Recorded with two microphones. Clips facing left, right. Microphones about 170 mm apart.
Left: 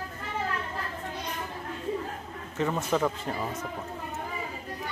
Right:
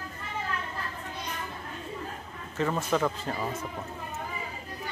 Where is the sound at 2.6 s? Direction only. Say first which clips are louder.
Even; 20° left (ahead or behind).